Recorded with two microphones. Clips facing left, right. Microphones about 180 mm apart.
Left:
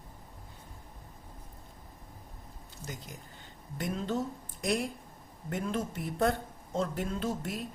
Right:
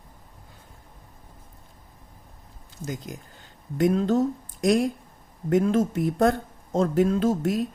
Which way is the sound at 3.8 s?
90° right.